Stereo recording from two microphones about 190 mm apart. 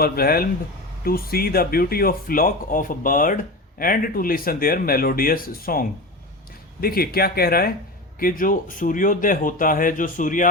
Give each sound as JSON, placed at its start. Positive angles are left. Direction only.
{"t": 0.0, "sound": "speech", "side_deg": 50}
{"t": 6.8, "sound": "speech", "side_deg": 50}